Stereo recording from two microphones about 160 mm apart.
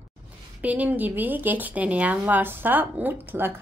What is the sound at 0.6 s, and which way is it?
A woman's voice, 10° right (ahead or behind).